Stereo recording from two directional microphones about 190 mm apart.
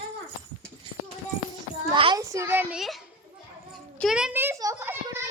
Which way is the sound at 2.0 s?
25° right (ahead or behind).